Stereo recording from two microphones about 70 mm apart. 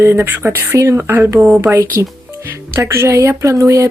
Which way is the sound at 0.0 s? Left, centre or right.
Right.